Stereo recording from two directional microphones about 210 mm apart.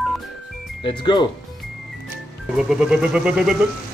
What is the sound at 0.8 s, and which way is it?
Speech, 25° left (ahead or behind).